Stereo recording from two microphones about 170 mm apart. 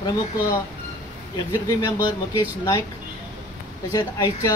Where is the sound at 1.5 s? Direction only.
20° left (ahead or behind).